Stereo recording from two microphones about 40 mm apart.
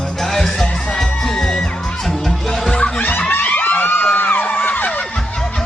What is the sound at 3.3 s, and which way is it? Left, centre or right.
Music, left.